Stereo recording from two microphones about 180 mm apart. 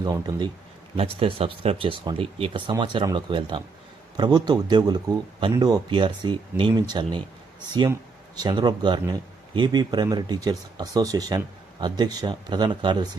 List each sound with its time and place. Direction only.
0.0 s speech: 20° right (ahead or behind)
8.4 s speech: 25° right (ahead or behind)